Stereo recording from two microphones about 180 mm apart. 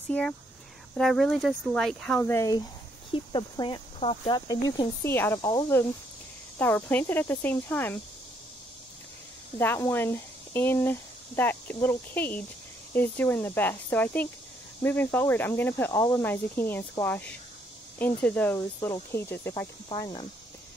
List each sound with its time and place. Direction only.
0.1 s speech: 10° left (ahead or behind)
2.1 s speech: 15° left (ahead or behind)
3.1 s speech: 25° left (ahead or behind)
4.5 s speech: 20° left (ahead or behind)
9.6 s speech: 15° left (ahead or behind)
19.9 s speech: 25° left (ahead or behind)